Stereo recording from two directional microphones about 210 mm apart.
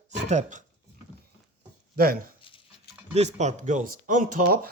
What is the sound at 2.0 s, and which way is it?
Speech, 45° right (ahead or behind).